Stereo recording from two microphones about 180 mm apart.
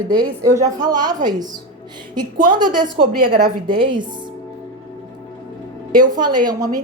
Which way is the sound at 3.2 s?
50° right (ahead or behind).